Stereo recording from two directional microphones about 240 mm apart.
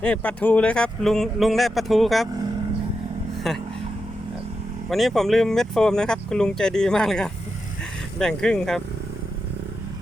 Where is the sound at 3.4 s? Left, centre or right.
Centre.